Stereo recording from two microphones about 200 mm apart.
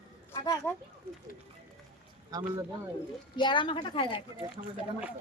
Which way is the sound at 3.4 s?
25° left (ahead or behind).